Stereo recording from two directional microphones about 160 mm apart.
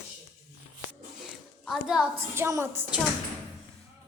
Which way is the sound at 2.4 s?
15° right (ahead or behind).